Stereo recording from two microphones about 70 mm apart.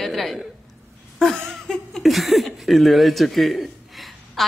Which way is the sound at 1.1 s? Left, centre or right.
Centre.